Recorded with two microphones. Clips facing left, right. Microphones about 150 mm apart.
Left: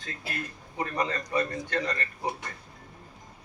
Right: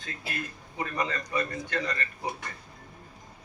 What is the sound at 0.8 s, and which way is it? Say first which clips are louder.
A man's voice: left 1 dB; 25° left (ahead or behind).